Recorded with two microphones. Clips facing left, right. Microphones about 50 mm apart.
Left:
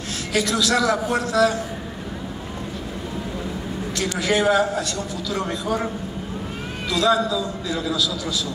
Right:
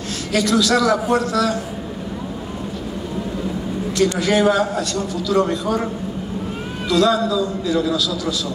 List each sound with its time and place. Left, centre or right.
0.3 s a man's voice: centre
4.0 s a man's voice: centre
6.9 s a man's voice: centre